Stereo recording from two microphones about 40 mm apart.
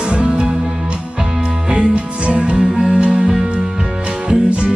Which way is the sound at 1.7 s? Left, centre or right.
Right.